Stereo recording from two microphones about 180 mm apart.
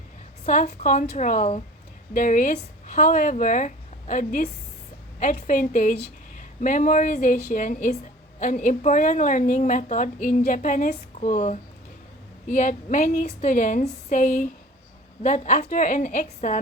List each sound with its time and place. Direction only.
0.4 s a woman's voice: 40° left (ahead or behind)